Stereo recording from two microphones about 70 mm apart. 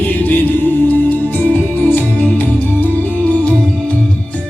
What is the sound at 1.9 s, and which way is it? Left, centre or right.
Music, left.